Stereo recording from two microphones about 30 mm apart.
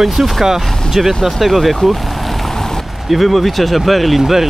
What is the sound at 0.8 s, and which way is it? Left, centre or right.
Speech, centre.